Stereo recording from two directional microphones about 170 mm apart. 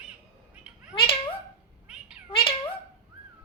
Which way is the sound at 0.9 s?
30° left (ahead or behind).